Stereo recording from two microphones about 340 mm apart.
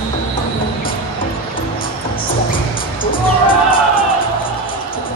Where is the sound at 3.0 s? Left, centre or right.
Centre.